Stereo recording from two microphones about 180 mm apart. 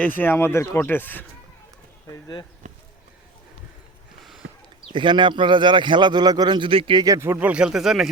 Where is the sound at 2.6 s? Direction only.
40° right (ahead or behind).